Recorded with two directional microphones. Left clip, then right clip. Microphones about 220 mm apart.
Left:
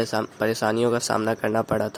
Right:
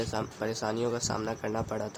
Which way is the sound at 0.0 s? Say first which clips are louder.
Left 9 dB; 35° left (ahead or behind).